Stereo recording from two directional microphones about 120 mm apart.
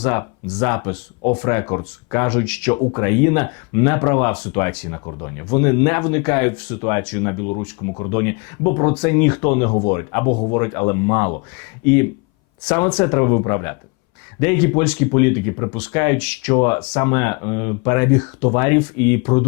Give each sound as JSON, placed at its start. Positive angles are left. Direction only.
{"t": 0.0, "sound": "speech", "side_deg": 25}
{"t": 2.7, "sound": "speech", "side_deg": 35}
{"t": 3.0, "sound": "speech", "side_deg": 20}
{"t": 4.9, "sound": "speech", "side_deg": 30}
{"t": 10.3, "sound": "speech", "side_deg": 40}
{"t": 10.6, "sound": "speech", "side_deg": 25}
{"t": 13.1, "sound": "speech", "side_deg": 25}